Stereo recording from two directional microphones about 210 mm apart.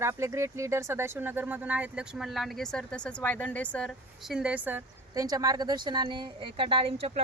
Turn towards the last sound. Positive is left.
turn(degrees=-30)  # may be behind; listen again after turning